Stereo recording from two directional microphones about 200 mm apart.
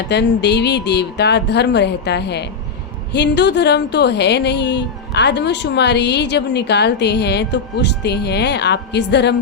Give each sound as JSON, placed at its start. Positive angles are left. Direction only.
{"t": 0.1, "sound": "a woman's voice", "side_deg": 60}